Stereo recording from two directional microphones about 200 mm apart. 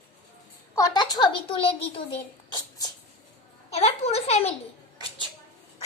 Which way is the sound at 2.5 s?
20° left (ahead or behind).